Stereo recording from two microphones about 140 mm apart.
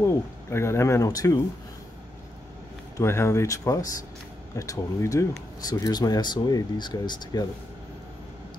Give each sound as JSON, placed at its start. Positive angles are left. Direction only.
{"t": 0.0, "sound": "speech", "side_deg": 20}
{"t": 3.0, "sound": "speech", "side_deg": 20}